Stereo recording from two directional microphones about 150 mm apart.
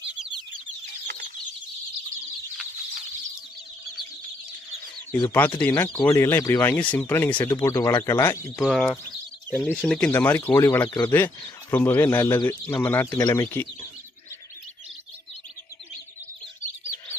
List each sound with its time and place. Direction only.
5.3 s speech: 10° left (ahead or behind)
8.6 s speech: 5° left (ahead or behind)